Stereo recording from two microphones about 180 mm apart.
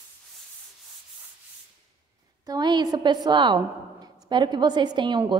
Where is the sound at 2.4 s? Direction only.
20° right (ahead or behind).